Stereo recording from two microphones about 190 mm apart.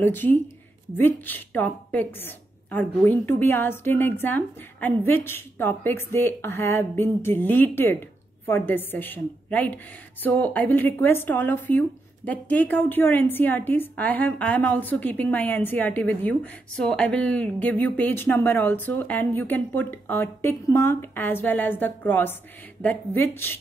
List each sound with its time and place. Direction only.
0.0 s a woman's voice: 10° left (ahead or behind)